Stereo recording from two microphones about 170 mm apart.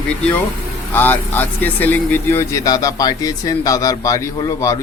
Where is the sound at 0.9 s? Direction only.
10° left (ahead or behind).